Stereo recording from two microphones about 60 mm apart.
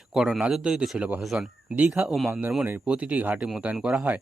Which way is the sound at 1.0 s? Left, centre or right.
Right.